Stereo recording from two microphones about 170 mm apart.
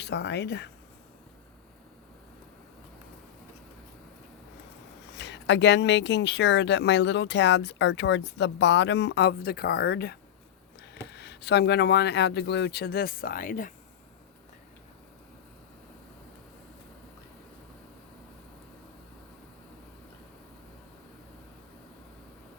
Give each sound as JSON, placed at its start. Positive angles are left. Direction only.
{"t": 0.0, "sound": "speech", "side_deg": 90}
{"t": 5.1, "sound": "speech", "side_deg": 90}